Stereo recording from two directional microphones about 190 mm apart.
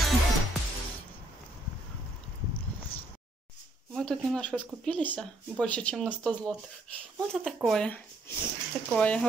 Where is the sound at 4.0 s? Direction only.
5° left (ahead or behind).